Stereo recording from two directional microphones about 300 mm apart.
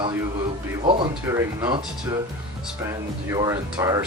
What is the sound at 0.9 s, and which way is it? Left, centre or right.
Speech, centre.